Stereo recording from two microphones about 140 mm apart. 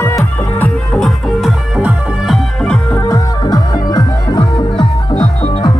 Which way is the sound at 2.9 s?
25° left (ahead or behind).